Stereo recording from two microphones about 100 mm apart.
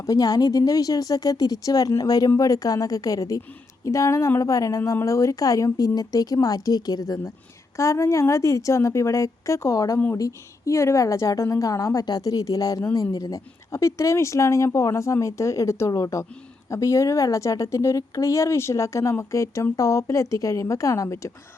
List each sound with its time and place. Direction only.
0.0 s a woman's voice: 35° left (ahead or behind)